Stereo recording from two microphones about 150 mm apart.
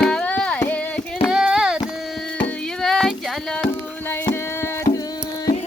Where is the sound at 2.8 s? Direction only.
5° left (ahead or behind).